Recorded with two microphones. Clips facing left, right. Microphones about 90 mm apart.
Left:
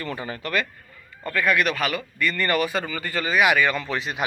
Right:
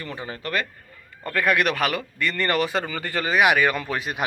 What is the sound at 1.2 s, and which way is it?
Speech, 55° right (ahead or behind).